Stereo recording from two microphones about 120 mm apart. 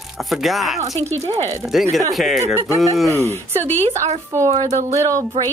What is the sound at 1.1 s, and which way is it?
Speech, 65° right (ahead or behind).